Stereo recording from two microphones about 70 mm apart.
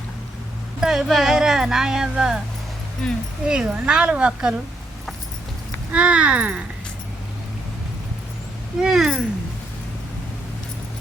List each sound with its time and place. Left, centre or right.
0.8 s speech: centre
3.4 s speech: centre
5.9 s speech: centre
8.8 s speech: centre